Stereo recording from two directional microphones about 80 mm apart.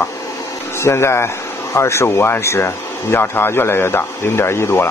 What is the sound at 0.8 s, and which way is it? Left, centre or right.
Speech, left.